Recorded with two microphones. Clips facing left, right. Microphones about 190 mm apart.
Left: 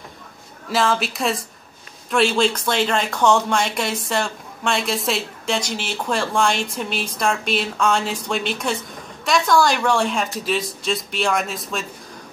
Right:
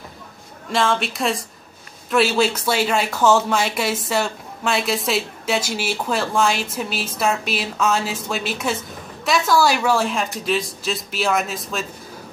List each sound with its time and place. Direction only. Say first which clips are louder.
0.7 s speech: even; centre (ahead or behind)